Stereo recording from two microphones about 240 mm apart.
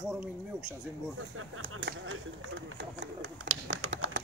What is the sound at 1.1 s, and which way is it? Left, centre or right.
Speech, right.